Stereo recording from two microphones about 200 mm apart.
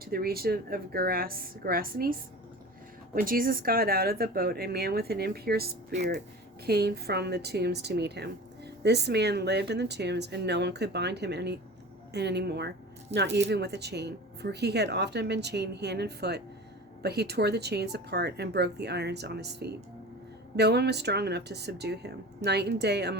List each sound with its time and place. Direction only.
0.0 s speech: 50° right (ahead or behind)
3.2 s speech: 45° right (ahead or behind)
6.7 s a woman's voice: 50° right (ahead or behind)